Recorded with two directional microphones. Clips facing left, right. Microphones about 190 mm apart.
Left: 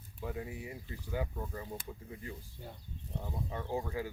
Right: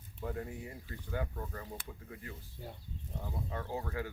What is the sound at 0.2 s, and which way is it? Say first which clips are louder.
Speech: even; 5° left (ahead or behind).